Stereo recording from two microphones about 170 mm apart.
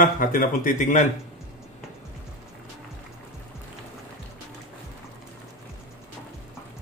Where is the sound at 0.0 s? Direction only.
55° left (ahead or behind).